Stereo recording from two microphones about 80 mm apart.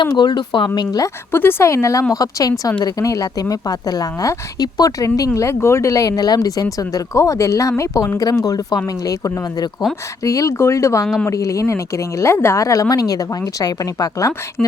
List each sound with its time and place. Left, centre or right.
0.0 s speech: left
0.8 s speech: left
1.3 s speech: left
2.1 s speech: left
6.7 s speech: left
8.3 s speech: left
10.2 s speech: left